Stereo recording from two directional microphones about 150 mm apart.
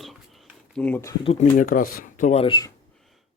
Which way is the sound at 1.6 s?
70° left (ahead or behind).